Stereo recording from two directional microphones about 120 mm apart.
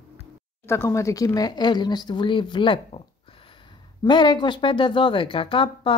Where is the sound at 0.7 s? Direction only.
20° left (ahead or behind); by 3.0 s 45° left (ahead or behind).